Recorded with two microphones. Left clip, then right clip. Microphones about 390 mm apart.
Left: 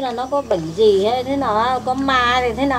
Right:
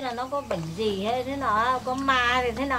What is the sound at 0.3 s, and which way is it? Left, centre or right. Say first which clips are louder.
Speech: left 12 dB; right.